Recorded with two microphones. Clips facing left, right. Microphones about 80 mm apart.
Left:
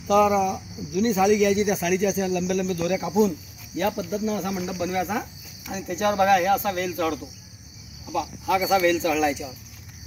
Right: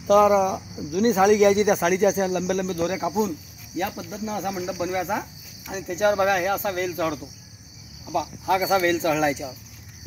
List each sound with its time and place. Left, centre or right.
0.0 s speech: right
2.7 s speech: right
3.7 s speech: centre
8.1 s speech: right